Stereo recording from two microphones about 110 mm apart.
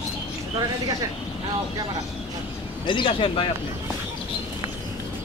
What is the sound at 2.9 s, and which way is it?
Speech, 50° left (ahead or behind).